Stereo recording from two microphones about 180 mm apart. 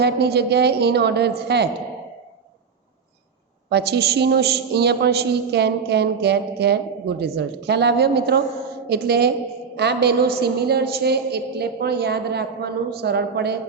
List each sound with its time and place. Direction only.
0.0 s a woman's voice: 65° right (ahead or behind)
3.7 s a man's voice: 65° right (ahead or behind)